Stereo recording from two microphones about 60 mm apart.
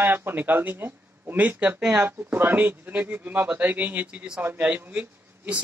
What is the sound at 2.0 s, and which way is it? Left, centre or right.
Speech, right.